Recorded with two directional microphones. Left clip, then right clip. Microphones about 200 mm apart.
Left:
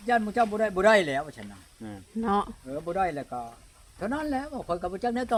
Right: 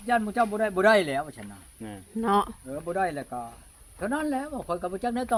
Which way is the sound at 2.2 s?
20° right (ahead or behind).